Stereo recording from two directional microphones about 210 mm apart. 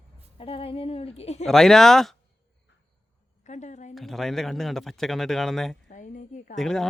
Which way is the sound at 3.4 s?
35° left (ahead or behind).